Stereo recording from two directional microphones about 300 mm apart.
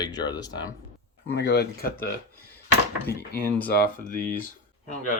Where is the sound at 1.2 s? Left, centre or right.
Left.